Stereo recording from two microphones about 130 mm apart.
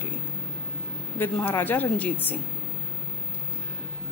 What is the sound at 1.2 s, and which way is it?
A woman's voice, 15° left (ahead or behind).